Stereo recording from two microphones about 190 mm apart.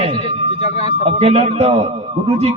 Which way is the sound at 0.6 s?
35° left (ahead or behind).